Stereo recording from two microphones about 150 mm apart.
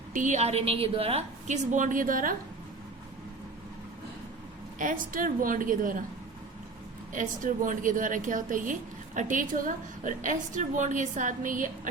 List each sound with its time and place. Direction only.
0.1 s a woman's voice: 55° right (ahead or behind)
1.7 s a woman's voice: 60° right (ahead or behind)
4.8 s a woman's voice: 65° right (ahead or behind)
7.1 s a woman's voice: 60° right (ahead or behind)